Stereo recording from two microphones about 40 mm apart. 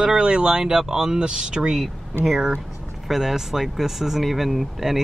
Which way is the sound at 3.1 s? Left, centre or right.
Centre.